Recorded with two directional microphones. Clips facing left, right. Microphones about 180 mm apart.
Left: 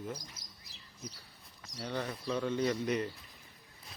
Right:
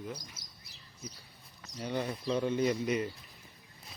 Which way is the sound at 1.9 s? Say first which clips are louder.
Right 3 dB; 15° right (ahead or behind).